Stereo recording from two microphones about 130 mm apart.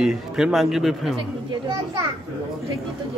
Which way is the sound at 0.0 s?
5° right (ahead or behind).